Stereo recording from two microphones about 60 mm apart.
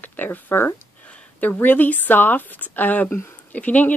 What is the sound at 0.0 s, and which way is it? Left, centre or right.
Speech, left.